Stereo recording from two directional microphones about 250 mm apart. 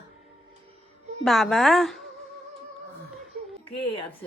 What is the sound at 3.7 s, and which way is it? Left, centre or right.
Speech, left.